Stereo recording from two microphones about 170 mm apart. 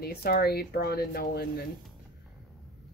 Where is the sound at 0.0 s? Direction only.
65° left (ahead or behind).